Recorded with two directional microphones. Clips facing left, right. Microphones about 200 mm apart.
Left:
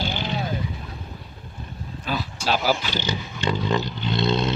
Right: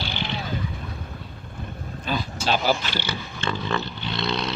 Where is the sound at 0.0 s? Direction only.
45° left (ahead or behind).